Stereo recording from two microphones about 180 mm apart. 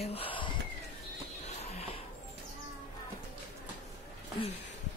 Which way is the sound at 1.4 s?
35° left (ahead or behind).